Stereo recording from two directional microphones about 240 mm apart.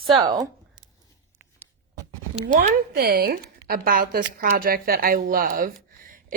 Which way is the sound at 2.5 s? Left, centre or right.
Right.